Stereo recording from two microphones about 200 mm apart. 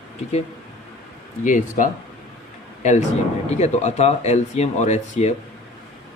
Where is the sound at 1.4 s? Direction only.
40° left (ahead or behind).